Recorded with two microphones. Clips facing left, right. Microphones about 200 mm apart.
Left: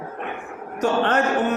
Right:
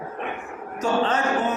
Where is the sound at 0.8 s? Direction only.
65° left (ahead or behind).